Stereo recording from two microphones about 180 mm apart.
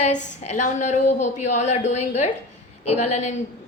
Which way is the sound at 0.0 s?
40° left (ahead or behind).